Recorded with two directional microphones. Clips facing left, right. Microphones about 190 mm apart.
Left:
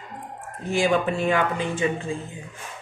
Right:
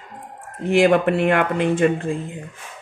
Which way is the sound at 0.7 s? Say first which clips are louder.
Right 6 dB; 60° right (ahead or behind).